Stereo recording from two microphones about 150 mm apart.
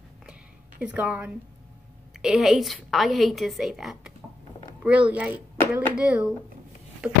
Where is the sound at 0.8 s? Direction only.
10° right (ahead or behind).